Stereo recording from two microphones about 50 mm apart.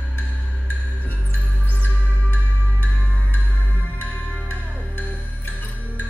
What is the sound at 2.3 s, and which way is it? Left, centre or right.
Music, left.